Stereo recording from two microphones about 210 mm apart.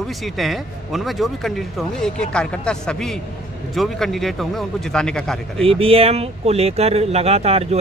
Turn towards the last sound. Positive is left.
turn(degrees=-30)  # may be behind; listen again after turning